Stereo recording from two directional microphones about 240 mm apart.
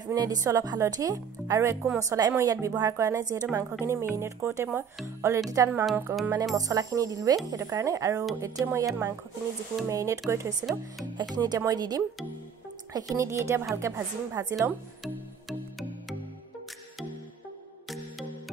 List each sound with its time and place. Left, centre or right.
0.1 s speech: centre
10.6 s speech: centre
11.3 s speech: centre